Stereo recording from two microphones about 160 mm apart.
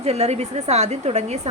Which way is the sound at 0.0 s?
40° right (ahead or behind).